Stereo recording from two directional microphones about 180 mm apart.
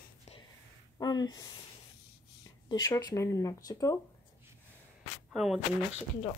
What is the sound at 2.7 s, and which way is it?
Speech, 20° left (ahead or behind).